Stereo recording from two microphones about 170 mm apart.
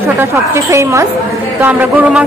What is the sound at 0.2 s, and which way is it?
A woman's voice, 20° right (ahead or behind).